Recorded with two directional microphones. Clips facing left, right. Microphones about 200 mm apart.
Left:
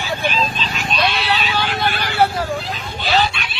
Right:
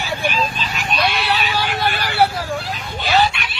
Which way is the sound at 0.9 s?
15° right (ahead or behind).